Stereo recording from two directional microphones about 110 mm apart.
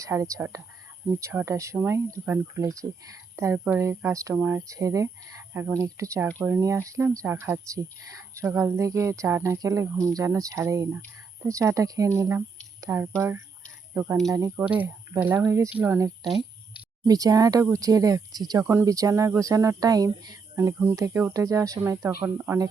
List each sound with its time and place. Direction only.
0.0 s speech: 30° right (ahead or behind)
2.6 s speech: 30° right (ahead or behind); by 14.2 s 15° right (ahead or behind)
14.3 s speech: 30° right (ahead or behind)
14.6 s speech: 10° right (ahead or behind)
16.0 s speech: 35° right (ahead or behind)
18.6 s speech: 25° right (ahead or behind)
20.6 s speech: 25° right (ahead or behind)